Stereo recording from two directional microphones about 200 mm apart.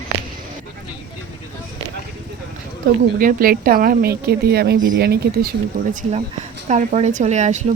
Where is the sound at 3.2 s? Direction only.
45° right (ahead or behind).